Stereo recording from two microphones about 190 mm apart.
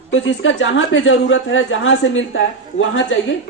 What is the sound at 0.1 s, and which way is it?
A woman's voice, 90° left.